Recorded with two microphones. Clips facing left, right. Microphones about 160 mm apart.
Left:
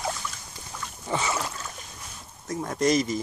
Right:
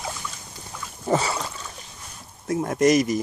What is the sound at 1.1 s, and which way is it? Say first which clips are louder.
Boat: right 6 dB; 35° right (ahead or behind).